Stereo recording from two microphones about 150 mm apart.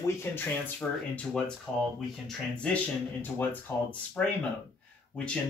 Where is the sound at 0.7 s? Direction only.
5° left (ahead or behind).